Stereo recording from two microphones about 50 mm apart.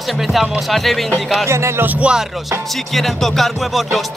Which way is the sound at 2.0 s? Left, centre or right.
Right.